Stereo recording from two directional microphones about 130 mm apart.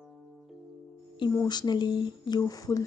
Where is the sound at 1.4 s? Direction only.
35° left (ahead or behind).